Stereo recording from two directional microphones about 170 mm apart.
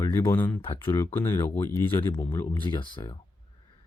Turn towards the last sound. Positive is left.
turn(degrees=30)  # may be behind; listen again after turning